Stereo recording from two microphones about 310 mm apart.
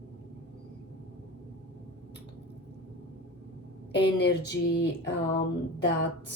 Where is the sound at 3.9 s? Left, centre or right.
Left.